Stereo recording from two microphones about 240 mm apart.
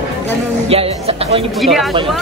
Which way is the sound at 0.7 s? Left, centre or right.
Right.